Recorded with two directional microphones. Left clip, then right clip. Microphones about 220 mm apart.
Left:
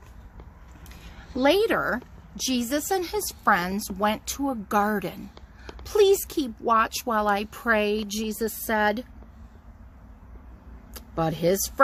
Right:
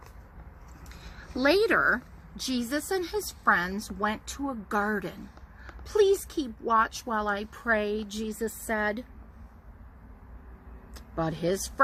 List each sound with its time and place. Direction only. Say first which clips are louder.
1.4 s a woman's voice: left 2 dB; 40° left (ahead or behind)
10.9 s speech: left 4 dB; 50° left (ahead or behind)